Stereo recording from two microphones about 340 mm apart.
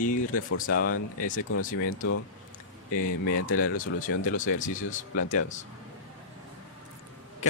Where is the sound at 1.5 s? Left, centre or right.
Left.